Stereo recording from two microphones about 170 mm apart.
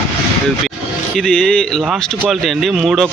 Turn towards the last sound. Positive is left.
turn(degrees=0)  # may be behind; listen again after turning